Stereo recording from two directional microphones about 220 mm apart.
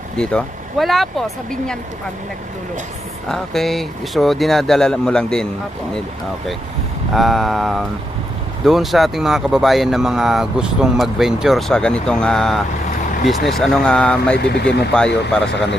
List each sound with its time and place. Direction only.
0.2 s speech: centre (ahead or behind)
3.2 s speech: centre (ahead or behind)
7.1 s speech: centre (ahead or behind)
14.3 s speech: 50° left (ahead or behind)
14.9 s speech: 5° left (ahead or behind)